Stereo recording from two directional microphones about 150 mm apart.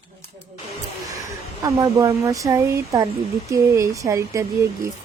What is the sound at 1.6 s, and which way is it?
Speech, 25° right (ahead or behind).